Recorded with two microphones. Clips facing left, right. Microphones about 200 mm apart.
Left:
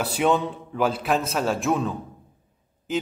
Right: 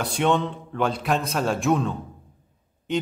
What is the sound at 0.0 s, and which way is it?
A man's voice, 5° left (ahead or behind).